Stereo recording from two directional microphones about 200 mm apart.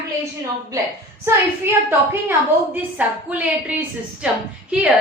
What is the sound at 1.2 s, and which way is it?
A woman's voice, 10° right (ahead or behind).